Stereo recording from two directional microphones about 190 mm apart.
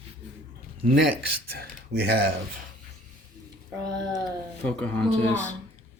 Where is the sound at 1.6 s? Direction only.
55° right (ahead or behind).